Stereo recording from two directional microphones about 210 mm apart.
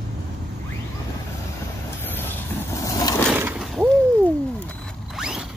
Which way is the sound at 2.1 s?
10° left (ahead or behind).